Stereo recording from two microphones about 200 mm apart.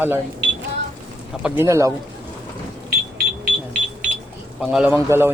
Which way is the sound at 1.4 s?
15° right (ahead or behind).